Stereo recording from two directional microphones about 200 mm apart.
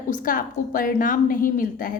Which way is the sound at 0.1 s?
45° left (ahead or behind).